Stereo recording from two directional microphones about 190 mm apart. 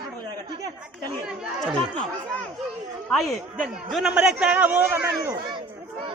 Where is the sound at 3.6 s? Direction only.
Centre (ahead or behind).